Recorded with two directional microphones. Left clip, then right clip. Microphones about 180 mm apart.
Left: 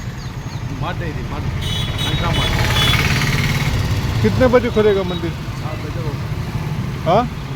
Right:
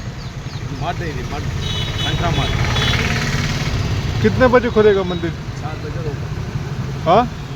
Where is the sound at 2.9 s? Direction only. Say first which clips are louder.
Left 2 dB; 70° left (ahead or behind); by 3.6 s 50° left (ahead or behind).